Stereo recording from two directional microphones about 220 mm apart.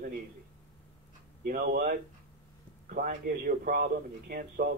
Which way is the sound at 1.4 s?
40° right (ahead or behind).